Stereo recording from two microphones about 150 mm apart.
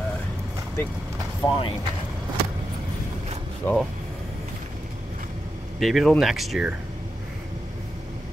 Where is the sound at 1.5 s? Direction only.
35° left (ahead or behind).